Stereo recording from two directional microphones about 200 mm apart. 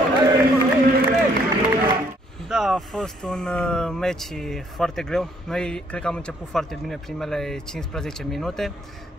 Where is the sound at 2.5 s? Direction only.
Centre (ahead or behind).